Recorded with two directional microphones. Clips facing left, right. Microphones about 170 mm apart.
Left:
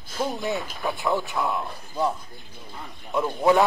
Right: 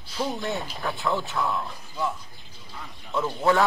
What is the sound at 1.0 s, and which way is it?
Speech, 15° left (ahead or behind).